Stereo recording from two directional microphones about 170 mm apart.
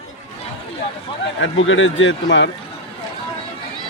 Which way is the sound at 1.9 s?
90° left.